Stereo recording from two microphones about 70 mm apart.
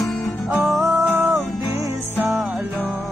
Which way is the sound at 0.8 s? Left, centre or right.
Right.